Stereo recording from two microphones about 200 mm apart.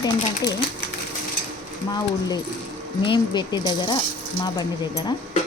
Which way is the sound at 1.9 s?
20° left (ahead or behind).